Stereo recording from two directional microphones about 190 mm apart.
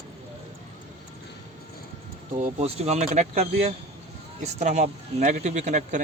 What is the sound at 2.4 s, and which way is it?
Speech, 35° right (ahead or behind).